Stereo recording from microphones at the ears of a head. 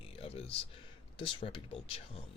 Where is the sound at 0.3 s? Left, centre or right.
Left.